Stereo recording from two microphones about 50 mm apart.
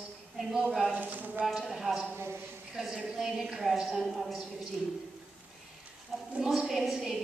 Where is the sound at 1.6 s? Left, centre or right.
Centre.